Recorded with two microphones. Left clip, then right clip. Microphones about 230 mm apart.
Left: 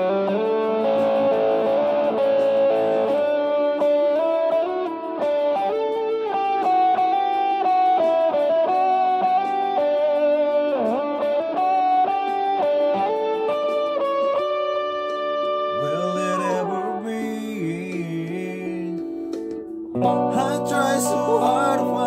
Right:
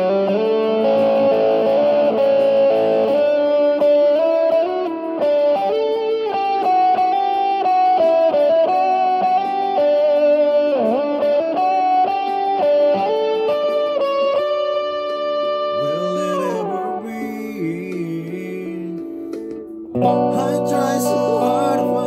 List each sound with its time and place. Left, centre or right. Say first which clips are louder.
0.0 s music: right 4 dB; right
15.9 s music: right 3 dB; centre
20.0 s music: right 4 dB; right